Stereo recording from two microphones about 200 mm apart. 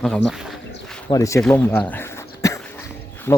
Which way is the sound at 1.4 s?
5° left (ahead or behind).